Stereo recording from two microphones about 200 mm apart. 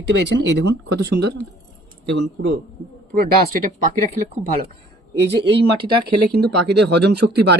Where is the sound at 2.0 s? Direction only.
65° right (ahead or behind).